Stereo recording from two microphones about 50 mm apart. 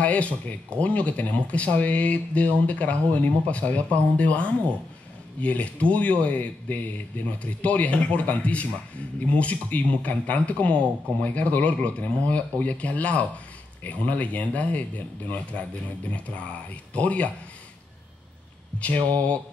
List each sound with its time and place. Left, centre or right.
0.0 s speech: left
18.8 s speech: left